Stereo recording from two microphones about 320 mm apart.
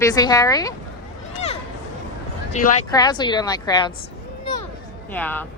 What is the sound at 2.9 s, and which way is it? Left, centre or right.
A woman's voice, centre.